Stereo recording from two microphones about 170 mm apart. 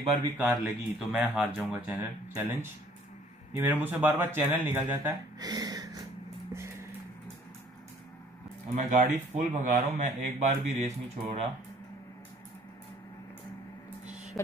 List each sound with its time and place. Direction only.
0.4 s speech: centre (ahead or behind)
5.4 s a sound: 20° right (ahead or behind)
6.5 s vehicle: 15° right (ahead or behind)
8.7 s speech: 45° right (ahead or behind)
14.3 s speech: centre (ahead or behind)